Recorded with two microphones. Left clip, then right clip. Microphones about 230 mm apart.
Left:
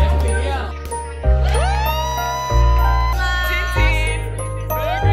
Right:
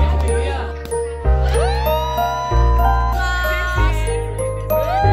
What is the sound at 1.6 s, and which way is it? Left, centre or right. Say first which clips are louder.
Music: right 2 dB; centre.